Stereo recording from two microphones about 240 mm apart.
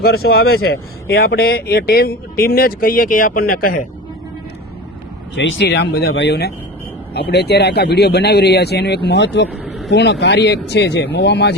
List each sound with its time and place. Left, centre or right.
0.0 s speech: left
5.3 s speech: left
9.5 s a sound: centre
9.9 s speech: left